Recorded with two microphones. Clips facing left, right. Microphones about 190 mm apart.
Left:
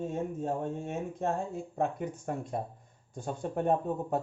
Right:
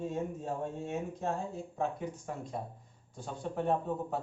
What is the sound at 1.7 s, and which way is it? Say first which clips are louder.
Speech: left 3 dB; 55° left (ahead or behind).